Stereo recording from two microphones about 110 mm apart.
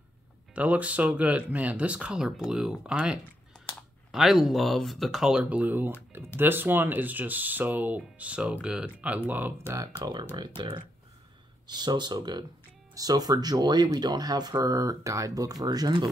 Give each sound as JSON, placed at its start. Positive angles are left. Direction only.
{"t": 0.6, "sound": "speech", "side_deg": -15}
{"t": 9.9, "sound": "speech", "side_deg": -40}